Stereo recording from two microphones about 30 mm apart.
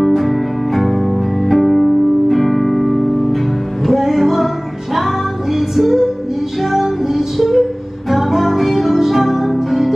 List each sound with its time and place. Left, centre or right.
0.0 s music: centre